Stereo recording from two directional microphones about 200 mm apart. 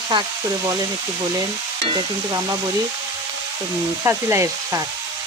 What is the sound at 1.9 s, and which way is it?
Speech, 20° right (ahead or behind).